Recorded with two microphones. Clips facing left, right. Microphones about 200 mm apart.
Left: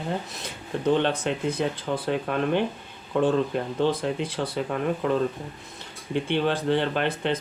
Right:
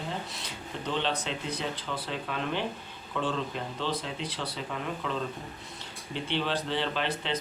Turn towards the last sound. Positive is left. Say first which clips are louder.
# left 6 dB
turn(degrees=55)  # may be behind; listen again after turning